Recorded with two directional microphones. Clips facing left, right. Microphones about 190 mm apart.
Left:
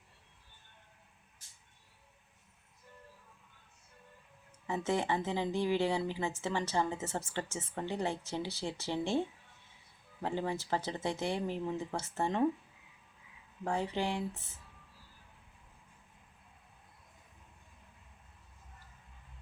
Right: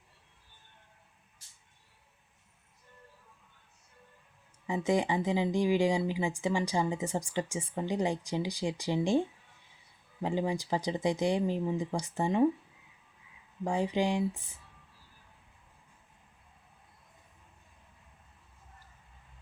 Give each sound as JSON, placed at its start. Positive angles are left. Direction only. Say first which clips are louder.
{"t": 4.6, "sound": "speech", "louder": "right 4 dB", "side_deg": -15}
{"t": 13.7, "sound": "speech", "louder": "right 5 dB", "side_deg": -15}